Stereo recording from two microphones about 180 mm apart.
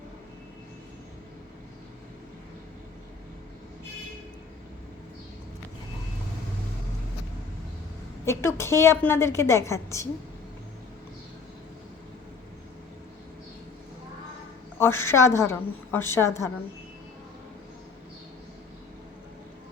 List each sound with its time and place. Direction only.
8.2 s a woman's voice: 15° left (ahead or behind)
14.8 s a woman's voice: 15° left (ahead or behind)